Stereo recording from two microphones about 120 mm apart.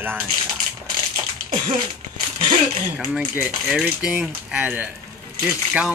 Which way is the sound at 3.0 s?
Centre (ahead or behind).